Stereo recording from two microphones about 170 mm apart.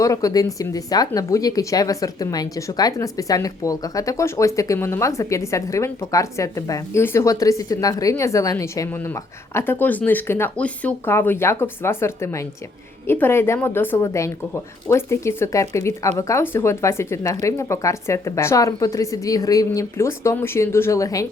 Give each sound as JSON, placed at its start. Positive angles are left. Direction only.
{"t": 0.0, "sound": "speech", "side_deg": 20}